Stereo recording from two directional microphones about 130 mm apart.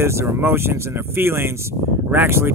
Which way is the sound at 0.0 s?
20° right (ahead or behind).